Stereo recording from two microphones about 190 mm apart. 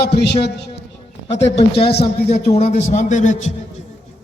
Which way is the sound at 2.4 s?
35° left (ahead or behind).